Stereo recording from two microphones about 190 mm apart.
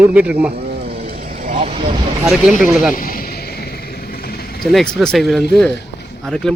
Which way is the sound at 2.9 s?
50° left (ahead or behind).